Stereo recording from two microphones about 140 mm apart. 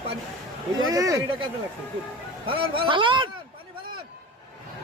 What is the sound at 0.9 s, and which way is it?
Speech, 25° right (ahead or behind).